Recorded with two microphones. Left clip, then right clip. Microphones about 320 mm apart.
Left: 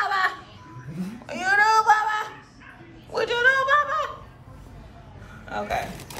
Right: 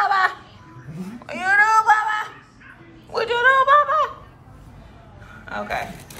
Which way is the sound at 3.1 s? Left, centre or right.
Centre.